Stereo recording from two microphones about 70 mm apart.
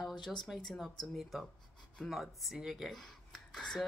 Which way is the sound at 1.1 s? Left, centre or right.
Centre.